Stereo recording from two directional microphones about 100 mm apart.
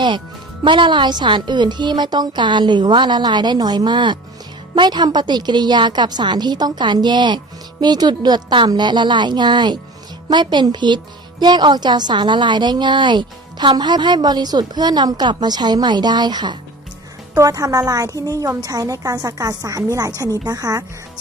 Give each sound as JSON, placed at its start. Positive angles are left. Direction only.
{"t": 0.6, "sound": "a woman's voice", "side_deg": -55}
{"t": 17.3, "sound": "a woman's voice", "side_deg": -35}